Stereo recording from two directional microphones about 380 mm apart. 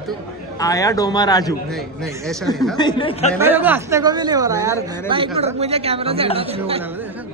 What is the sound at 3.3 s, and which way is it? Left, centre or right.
A woman's voice, centre.